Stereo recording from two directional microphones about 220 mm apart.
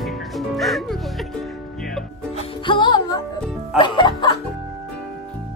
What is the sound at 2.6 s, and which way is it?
Music, 20° left (ahead or behind).